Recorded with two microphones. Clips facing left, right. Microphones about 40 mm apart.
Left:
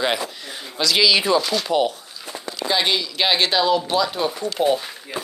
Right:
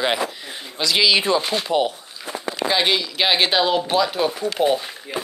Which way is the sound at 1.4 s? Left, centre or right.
Right.